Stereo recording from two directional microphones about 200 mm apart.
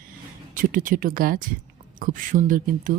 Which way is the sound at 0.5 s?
40° right (ahead or behind).